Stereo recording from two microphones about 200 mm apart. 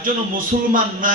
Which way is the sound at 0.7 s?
40° right (ahead or behind).